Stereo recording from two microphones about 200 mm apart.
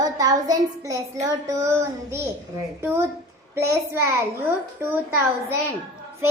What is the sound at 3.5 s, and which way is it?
A child's voice, 15° right (ahead or behind).